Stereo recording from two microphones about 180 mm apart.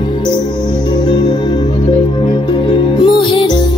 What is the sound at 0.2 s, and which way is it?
Music, 25° left (ahead or behind).